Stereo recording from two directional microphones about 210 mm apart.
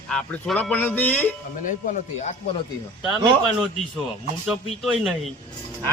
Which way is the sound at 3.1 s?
5° right (ahead or behind).